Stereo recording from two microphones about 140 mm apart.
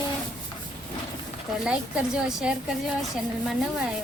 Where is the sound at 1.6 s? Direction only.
5° right (ahead or behind).